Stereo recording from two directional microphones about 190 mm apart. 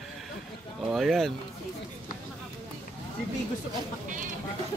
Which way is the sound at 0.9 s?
Centre (ahead or behind).